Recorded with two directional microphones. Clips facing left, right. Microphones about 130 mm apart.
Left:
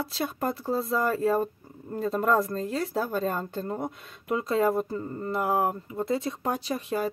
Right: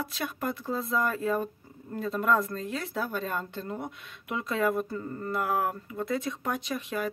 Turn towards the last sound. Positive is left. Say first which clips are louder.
# left 3 dB
turn(degrees=35)  # may be behind; listen again after turning